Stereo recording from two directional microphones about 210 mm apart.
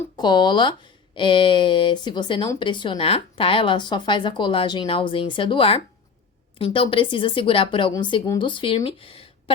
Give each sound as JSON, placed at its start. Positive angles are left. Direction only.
{"t": 0.2, "sound": "speech", "side_deg": 20}